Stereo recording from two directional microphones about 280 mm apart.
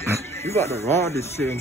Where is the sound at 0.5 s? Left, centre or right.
Centre.